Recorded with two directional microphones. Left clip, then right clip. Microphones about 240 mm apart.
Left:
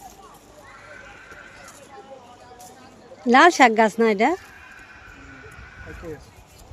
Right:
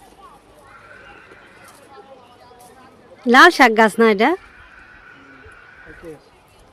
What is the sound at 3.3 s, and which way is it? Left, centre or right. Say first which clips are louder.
Speech: right 4 dB; centre.